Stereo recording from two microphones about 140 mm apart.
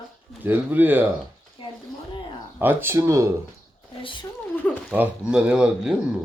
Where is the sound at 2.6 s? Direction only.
15° right (ahead or behind).